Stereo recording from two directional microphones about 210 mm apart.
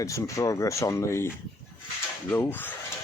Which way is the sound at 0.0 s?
15° left (ahead or behind).